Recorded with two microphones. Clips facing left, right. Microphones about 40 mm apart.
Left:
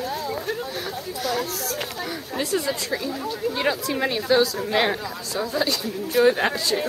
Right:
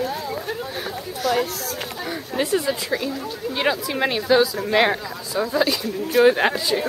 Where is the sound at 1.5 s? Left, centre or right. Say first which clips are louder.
Even; right.